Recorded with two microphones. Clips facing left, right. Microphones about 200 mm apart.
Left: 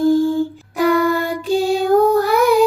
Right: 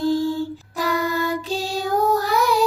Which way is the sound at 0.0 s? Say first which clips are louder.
Left 6 dB; 50° left (ahead or behind).